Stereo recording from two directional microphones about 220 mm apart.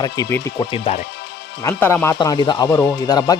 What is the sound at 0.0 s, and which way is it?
Speech, 15° left (ahead or behind).